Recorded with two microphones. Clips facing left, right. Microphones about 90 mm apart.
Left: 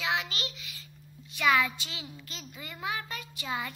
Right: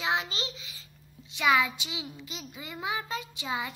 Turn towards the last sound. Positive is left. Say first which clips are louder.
# right 1 dB
turn(degrees=-15)  # may be behind; listen again after turning